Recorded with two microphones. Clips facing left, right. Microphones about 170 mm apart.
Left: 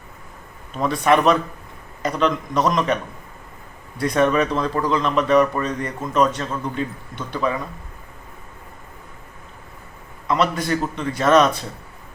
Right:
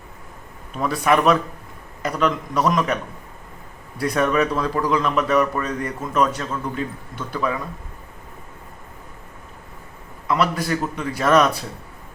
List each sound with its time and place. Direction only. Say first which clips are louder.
0.8 s a man's voice: left 1 dB; 5° right (ahead or behind)
10.2 s a man's voice: left 1 dB; 5° right (ahead or behind)